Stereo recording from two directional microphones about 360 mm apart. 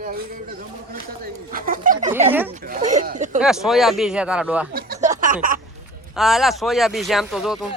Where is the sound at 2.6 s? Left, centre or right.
Right.